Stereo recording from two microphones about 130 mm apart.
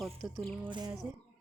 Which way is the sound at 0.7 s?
35° right (ahead or behind).